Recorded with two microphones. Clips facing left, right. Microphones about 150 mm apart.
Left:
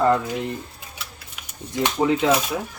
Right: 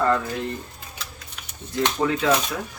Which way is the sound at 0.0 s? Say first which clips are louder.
Left 3 dB; 15° left (ahead or behind).